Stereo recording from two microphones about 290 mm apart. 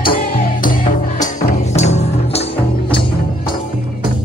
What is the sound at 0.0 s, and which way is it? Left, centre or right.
Music, left.